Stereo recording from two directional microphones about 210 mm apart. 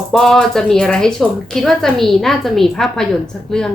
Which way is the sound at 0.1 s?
Centre (ahead or behind).